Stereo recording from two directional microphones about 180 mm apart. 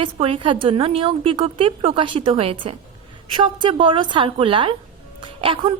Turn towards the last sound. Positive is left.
turn(degrees=-30)  # may be behind; listen again after turning